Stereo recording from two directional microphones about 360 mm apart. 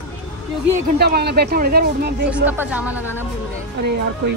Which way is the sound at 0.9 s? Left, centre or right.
Right.